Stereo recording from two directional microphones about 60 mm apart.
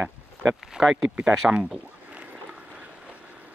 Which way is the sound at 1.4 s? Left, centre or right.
Centre.